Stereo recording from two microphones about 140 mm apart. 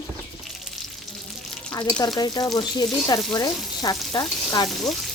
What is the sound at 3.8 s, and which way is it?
Frying, 30° left (ahead or behind).